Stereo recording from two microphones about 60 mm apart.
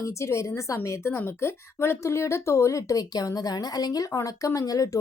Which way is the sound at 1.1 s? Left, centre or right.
Left.